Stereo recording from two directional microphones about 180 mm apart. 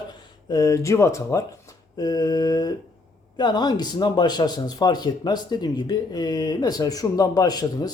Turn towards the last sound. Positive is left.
turn(degrees=20)  # may be behind; listen again after turning